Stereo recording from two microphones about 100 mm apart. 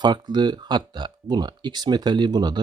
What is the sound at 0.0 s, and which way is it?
Speech, 45° right (ahead or behind).